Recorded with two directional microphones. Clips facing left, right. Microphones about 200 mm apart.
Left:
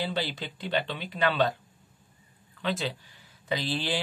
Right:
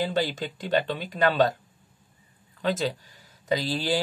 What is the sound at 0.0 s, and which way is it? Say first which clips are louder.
Speech: right 5 dB; 45° right (ahead or behind).